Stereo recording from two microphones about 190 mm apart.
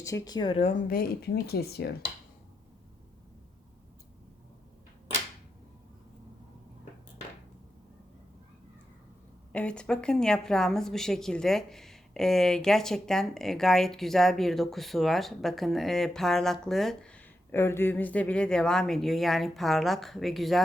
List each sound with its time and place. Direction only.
0.0 s speech: 20° left (ahead or behind)
0.9 s speech: 50° left (ahead or behind)
9.5 s speech: 5° left (ahead or behind)